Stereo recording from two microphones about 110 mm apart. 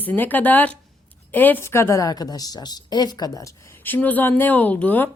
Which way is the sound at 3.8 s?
15° left (ahead or behind).